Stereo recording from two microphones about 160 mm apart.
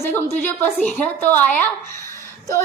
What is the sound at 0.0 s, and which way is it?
A woman's voice, 15° left (ahead or behind).